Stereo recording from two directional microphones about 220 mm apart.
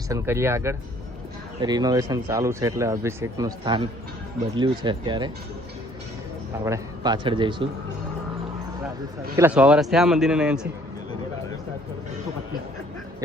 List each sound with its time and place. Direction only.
0.1 s a man's voice: 10° right (ahead or behind)
6.7 s a man's voice: 15° right (ahead or behind)
9.3 s a man's voice: 10° right (ahead or behind)